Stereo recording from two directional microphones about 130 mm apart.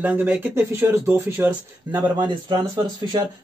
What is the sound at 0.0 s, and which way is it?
Speech, 10° right (ahead or behind).